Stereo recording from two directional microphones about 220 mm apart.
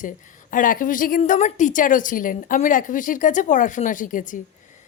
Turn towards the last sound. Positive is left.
turn(degrees=35)  # may be behind; listen again after turning